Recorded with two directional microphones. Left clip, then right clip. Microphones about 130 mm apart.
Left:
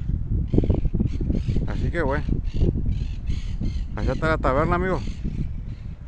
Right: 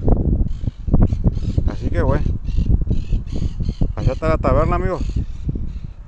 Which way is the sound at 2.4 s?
40° left (ahead or behind).